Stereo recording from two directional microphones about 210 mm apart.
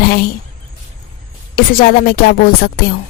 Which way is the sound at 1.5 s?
45° left (ahead or behind).